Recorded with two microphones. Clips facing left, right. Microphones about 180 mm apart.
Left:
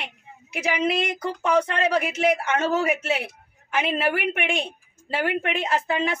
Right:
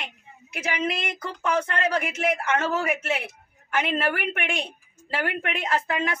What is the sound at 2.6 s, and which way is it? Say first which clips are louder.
A woman's voice: left 3 dB; 15° left (ahead or behind).